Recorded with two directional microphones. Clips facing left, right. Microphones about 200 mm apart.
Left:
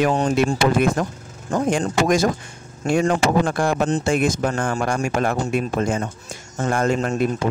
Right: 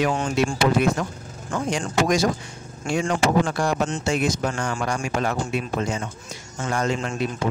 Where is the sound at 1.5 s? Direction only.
35° left (ahead or behind).